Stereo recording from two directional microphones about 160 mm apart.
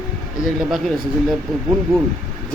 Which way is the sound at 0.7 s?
Centre (ahead or behind).